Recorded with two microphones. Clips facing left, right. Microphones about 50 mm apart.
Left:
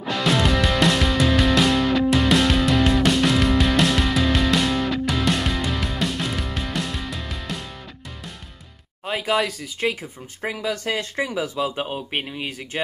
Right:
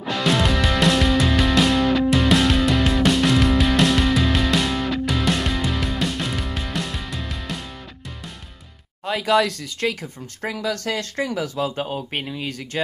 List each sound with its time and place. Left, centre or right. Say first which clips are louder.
0.0 s music: even; centre
9.2 s speech: right 4 dB; centre
10.4 s speech: even; left
11.6 s speech: right 1 dB; left
12.2 s speech: even; left